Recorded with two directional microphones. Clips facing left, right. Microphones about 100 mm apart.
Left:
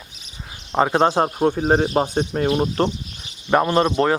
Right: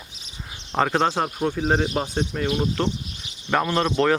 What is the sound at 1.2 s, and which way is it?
Speech, 30° left (ahead or behind).